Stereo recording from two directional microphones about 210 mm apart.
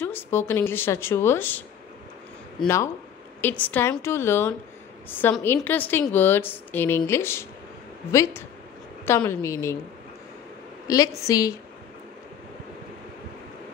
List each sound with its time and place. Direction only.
0.0 s a woman's voice: 10° left (ahead or behind)
3.3 s a woman's voice: 10° left (ahead or behind)
10.9 s a woman's voice: 15° left (ahead or behind)